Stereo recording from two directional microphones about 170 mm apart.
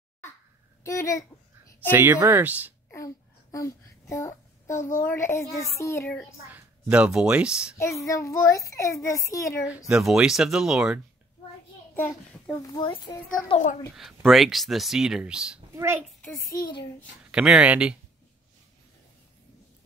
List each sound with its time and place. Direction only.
0.8 s a child's voice: 20° left (ahead or behind)
1.9 s speech: 10° right (ahead or behind)
3.5 s a sound: 20° left (ahead or behind)
4.9 s a child's voice: 15° left (ahead or behind)
6.5 s speech: 5° right (ahead or behind)
7.7 s a child's voice: 15° left (ahead or behind)
9.8 s speech: 5° right (ahead or behind)
11.9 s a child's voice: 10° left (ahead or behind)
13.9 s speech: centre (ahead or behind)
17.3 s speech: 5° right (ahead or behind)